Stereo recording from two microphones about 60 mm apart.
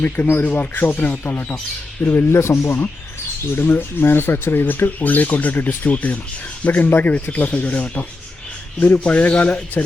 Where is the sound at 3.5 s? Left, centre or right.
Left.